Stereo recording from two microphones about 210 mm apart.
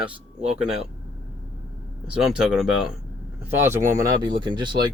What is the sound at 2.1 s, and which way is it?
Speech, 5° right (ahead or behind).